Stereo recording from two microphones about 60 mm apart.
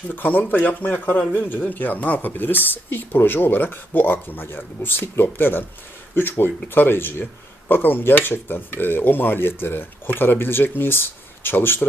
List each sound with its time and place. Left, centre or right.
0.1 s speech: left